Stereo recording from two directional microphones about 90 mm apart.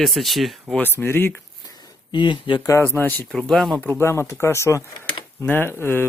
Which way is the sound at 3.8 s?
20° left (ahead or behind).